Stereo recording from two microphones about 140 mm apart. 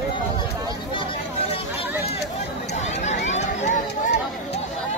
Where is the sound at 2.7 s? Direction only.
55° left (ahead or behind).